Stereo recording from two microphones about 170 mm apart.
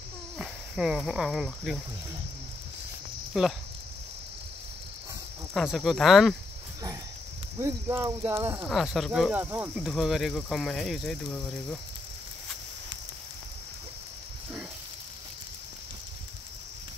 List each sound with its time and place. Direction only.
0.4 s speech: 5° right (ahead or behind)
3.3 s speech: centre (ahead or behind)
5.5 s speech: centre (ahead or behind)
7.5 s speech: 15° right (ahead or behind)
8.6 s speech: centre (ahead or behind)